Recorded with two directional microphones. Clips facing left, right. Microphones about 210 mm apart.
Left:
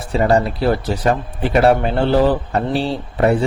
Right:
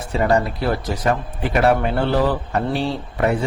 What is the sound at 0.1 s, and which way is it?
Speech, 30° left (ahead or behind).